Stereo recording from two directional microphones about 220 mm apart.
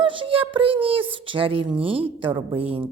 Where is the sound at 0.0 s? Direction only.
25° right (ahead or behind).